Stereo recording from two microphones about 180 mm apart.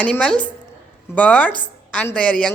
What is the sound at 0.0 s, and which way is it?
A woman's voice, 5° left (ahead or behind).